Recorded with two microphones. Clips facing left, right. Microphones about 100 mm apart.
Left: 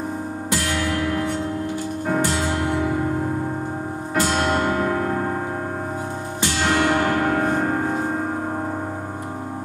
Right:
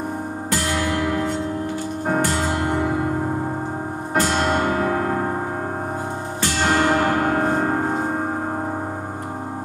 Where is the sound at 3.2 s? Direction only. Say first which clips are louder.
Right 1 dB; 30° right (ahead or behind).